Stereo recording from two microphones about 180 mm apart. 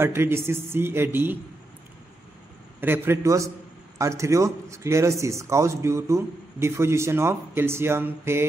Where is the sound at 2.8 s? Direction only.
10° right (ahead or behind).